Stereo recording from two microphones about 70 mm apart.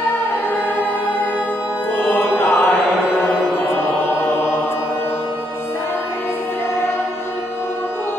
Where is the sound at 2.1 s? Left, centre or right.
Left.